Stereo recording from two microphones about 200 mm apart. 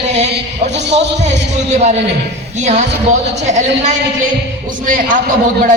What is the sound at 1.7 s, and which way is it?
A woman's voice, 35° right (ahead or behind).